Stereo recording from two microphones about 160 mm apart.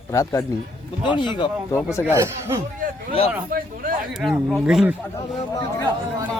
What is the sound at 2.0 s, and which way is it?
Speech, 15° right (ahead or behind).